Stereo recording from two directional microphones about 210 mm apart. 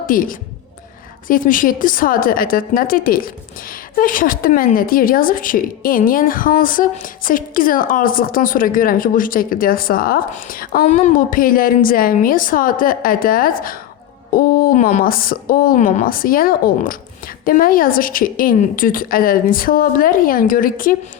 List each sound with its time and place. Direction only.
0.0 s a woman's voice: 40° left (ahead or behind)